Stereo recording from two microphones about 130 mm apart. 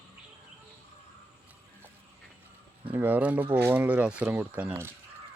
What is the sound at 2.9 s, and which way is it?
Speech, 15° right (ahead or behind).